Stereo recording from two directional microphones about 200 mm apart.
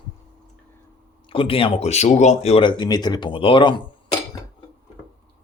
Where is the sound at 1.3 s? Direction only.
25° left (ahead or behind).